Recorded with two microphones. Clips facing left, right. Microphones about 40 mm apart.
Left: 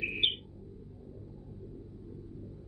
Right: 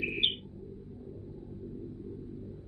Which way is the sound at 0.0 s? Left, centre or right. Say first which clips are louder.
Even; centre.